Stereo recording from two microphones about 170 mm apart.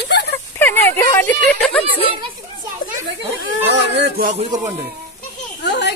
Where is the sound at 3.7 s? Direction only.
90° right.